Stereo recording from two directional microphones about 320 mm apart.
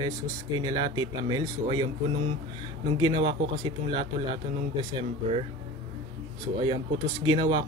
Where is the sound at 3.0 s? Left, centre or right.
Centre.